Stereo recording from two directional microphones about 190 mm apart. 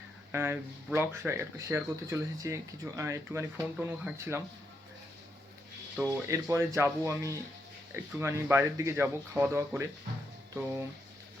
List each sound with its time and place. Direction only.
0.3 s speech: 10° right (ahead or behind)
6.0 s speech: 15° right (ahead or behind)